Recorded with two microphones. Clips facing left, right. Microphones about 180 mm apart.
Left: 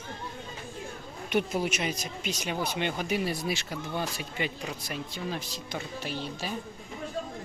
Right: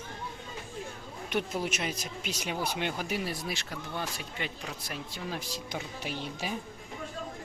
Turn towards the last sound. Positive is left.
turn(degrees=-15)  # may be behind; listen again after turning